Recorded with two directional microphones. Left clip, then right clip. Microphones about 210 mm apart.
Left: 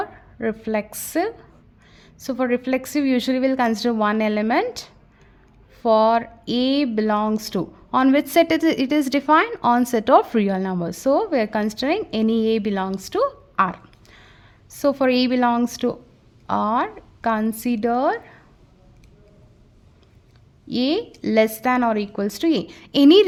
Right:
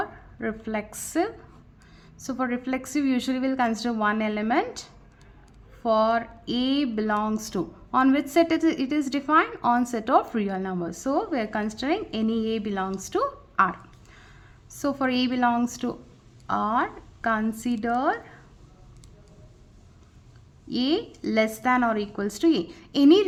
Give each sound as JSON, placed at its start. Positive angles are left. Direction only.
{"t": 0.0, "sound": "speech", "side_deg": 30}
{"t": 20.7, "sound": "speech", "side_deg": 30}